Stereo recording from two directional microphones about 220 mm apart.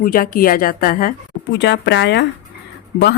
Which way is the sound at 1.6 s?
50° left (ahead or behind).